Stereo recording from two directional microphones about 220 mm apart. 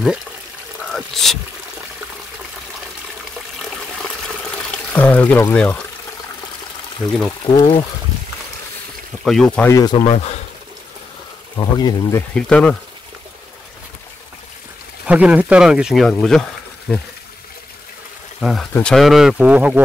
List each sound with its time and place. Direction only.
0.8 s speech: centre (ahead or behind)
4.6 s speech: 5° left (ahead or behind)
7.1 s speech: 5° left (ahead or behind)
7.4 s speech: 25° left (ahead or behind)
9.2 s speech: centre (ahead or behind)
9.7 s speech: 15° left (ahead or behind)
10.1 s a sound: 30° left (ahead or behind)
11.5 s speech: 15° left (ahead or behind)
15.0 s speech: 5° right (ahead or behind)
18.4 s speech: centre (ahead or behind)